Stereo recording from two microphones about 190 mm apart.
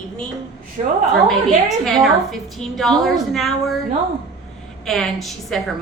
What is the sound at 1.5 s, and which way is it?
A woman's voice, centre (ahead or behind).